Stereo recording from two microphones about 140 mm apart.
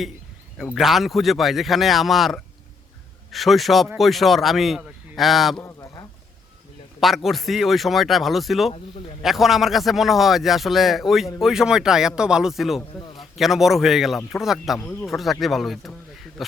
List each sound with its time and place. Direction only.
0.6 s a man's voice: centre (ahead or behind)
5.6 s a sound: 25° left (ahead or behind)
7.0 s a man's voice: centre (ahead or behind)